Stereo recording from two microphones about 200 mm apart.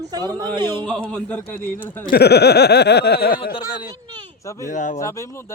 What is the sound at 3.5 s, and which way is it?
Speech, 20° left (ahead or behind).